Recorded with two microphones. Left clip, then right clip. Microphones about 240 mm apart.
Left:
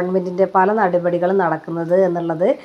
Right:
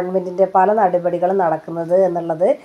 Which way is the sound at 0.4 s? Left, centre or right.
Left.